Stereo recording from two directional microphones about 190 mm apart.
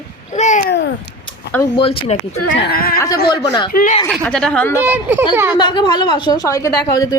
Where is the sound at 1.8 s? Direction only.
30° left (ahead or behind).